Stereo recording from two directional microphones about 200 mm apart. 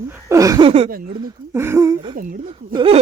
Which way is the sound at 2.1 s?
45° right (ahead or behind).